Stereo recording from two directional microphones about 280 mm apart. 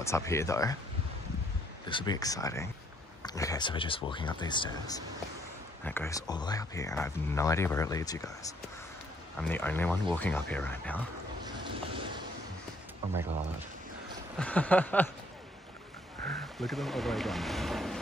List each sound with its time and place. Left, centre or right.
0.0 s speech: centre
1.9 s speech: centre
9.4 s speech: centre
11.4 s boat: centre
14.4 s speech: centre
16.3 s speech: centre